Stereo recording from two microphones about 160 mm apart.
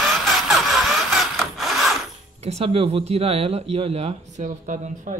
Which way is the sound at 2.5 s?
40° right (ahead or behind).